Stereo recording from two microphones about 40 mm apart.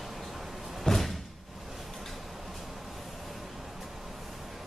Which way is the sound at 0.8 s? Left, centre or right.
Centre.